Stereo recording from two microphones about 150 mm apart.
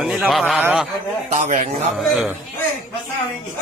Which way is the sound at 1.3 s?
55° right (ahead or behind).